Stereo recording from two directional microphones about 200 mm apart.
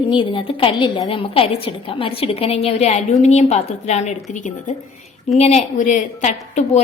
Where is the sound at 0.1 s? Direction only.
25° left (ahead or behind).